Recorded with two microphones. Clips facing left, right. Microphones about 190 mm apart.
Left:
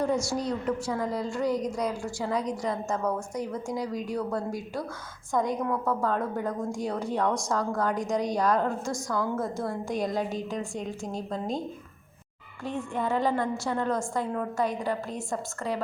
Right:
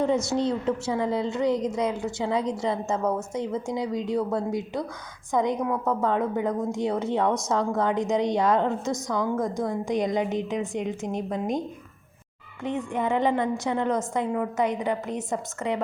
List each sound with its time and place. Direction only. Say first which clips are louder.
0.0 s a woman's voice: right 4 dB; 20° right (ahead or behind)
9.1 s a woman's voice: right 2 dB; 5° left (ahead or behind)
9.4 s a woman's voice: right 4 dB; 15° right (ahead or behind)
12.6 s a woman's voice: right 3 dB; 20° right (ahead or behind)